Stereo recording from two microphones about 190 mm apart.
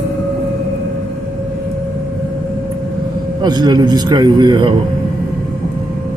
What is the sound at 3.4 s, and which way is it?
A man's voice, 20° right (ahead or behind).